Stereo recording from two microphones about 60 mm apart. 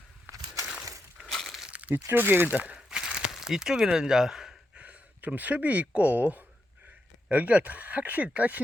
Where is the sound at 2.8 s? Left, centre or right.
Centre.